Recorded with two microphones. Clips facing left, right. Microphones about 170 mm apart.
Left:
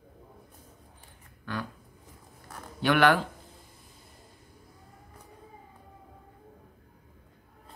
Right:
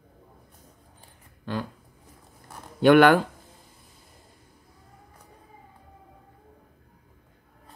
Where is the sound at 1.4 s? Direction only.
25° right (ahead or behind).